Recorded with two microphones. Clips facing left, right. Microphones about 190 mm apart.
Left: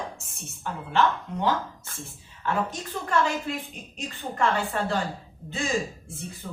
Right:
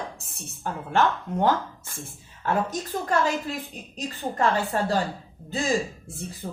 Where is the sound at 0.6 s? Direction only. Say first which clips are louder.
Right 1 dB; 45° right (ahead or behind).